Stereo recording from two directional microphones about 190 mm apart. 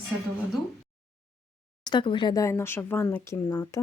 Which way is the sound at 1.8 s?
25° left (ahead or behind).